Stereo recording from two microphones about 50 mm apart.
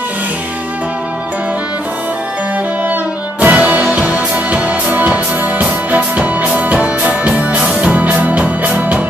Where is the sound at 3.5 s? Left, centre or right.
Right.